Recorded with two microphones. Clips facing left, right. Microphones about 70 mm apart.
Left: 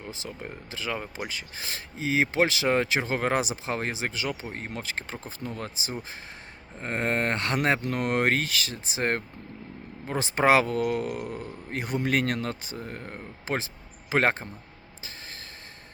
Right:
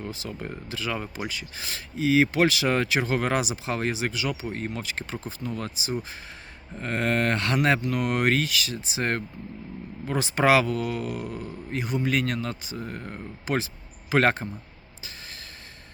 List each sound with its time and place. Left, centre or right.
0.1 s speech: left
13.1 s speech: left